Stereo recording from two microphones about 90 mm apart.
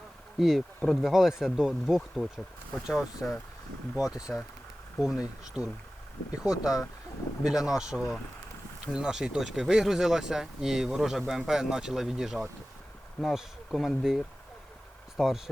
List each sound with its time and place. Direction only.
0.3 s speech: 5° right (ahead or behind)
3.0 s speech: 30° left (ahead or behind)
4.0 s speech: 40° left (ahead or behind)
5.0 s speech: 5° right (ahead or behind)